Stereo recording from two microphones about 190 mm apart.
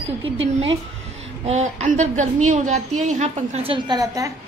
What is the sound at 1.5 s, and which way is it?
A woman's voice, 35° right (ahead or behind).